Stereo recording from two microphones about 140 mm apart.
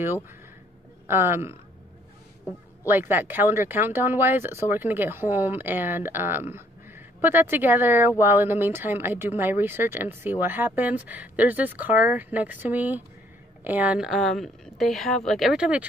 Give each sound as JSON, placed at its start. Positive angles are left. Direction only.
{"t": 1.0, "sound": "speech", "side_deg": -15}
{"t": 2.8, "sound": "speech", "side_deg": -15}